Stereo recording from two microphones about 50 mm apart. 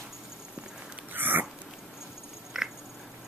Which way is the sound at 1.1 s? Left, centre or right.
Right.